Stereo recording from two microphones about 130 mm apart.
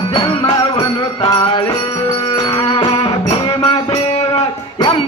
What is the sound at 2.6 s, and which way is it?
Music, 45° left (ahead or behind).